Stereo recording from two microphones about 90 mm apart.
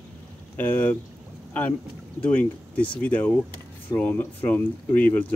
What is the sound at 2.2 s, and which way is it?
Speech, 15° left (ahead or behind).